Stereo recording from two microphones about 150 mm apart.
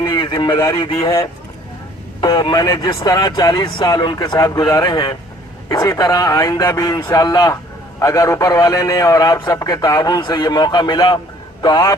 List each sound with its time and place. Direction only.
0.0 s a sound: 30° left (ahead or behind)
0.9 s a man's voice: 20° left (ahead or behind)
2.2 s a man's voice: 25° left (ahead or behind)